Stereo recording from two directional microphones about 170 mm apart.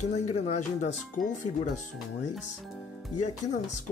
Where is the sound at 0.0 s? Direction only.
45° left (ahead or behind).